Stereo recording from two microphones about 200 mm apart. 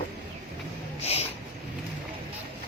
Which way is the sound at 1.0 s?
30° left (ahead or behind).